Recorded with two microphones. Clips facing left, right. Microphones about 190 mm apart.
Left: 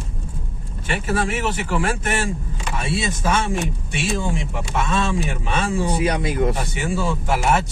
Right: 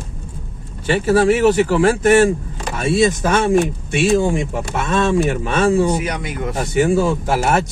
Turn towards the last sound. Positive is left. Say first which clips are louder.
# right 3 dB
turn(degrees=-45)  # may be behind; listen again after turning